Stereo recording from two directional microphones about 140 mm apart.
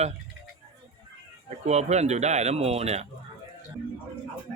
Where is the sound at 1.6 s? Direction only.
55° right (ahead or behind).